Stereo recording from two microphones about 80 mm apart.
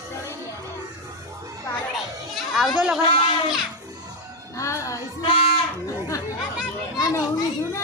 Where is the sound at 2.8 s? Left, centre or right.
Centre.